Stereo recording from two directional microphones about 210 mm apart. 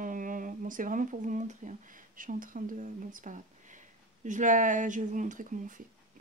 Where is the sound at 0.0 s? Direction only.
40° right (ahead or behind).